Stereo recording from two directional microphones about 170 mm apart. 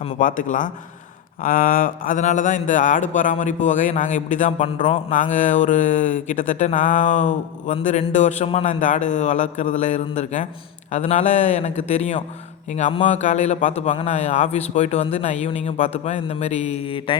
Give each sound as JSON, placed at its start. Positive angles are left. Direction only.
{"t": 0.2, "sound": "a man's voice", "side_deg": 50}